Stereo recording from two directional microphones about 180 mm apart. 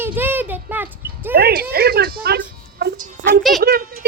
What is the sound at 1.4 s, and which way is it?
Speech, 60° right (ahead or behind).